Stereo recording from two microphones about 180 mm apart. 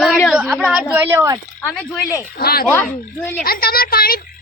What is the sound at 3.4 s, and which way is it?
Speech, 55° left (ahead or behind).